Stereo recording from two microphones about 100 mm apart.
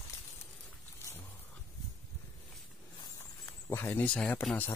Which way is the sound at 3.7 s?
25° left (ahead or behind).